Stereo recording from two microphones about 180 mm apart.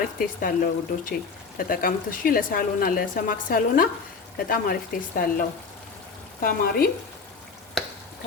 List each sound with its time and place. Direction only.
0.2 s a woman's voice: 50° left (ahead or behind)